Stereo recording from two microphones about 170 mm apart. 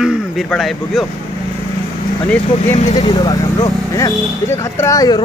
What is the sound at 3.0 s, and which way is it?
Speech, 25° left (ahead or behind).